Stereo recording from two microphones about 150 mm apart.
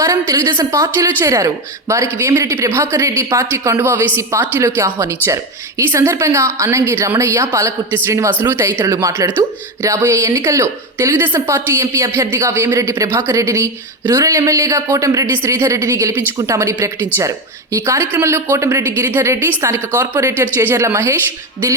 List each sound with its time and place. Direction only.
0.0 s a woman's voice: 20° right (ahead or behind)